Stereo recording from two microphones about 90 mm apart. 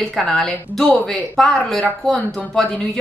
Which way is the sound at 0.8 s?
15° left (ahead or behind).